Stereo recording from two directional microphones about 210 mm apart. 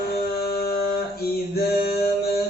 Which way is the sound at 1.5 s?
50° left (ahead or behind).